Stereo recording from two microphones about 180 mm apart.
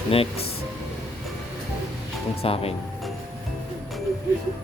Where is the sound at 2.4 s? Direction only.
30° left (ahead or behind).